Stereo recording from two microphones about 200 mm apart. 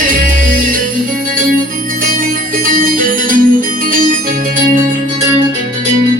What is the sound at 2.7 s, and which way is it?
Music, 45° right (ahead or behind).